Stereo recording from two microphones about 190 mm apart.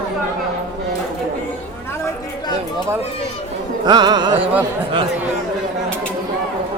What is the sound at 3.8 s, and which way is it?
Music, 20° right (ahead or behind).